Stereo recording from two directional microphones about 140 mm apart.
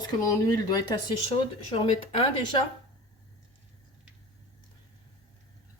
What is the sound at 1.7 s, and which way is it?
Speech, 40° left (ahead or behind).